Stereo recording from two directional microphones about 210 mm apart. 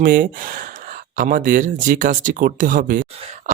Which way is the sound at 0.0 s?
40° right (ahead or behind).